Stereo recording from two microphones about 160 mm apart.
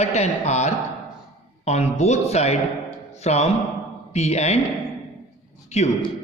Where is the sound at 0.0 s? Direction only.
45° left (ahead or behind).